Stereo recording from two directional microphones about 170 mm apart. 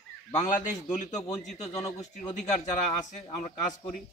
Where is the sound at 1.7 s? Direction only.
20° left (ahead or behind).